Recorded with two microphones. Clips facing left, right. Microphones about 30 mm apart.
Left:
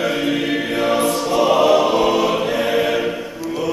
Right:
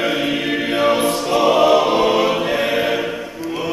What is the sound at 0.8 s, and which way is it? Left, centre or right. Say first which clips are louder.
Choir: right 1 dB; centre.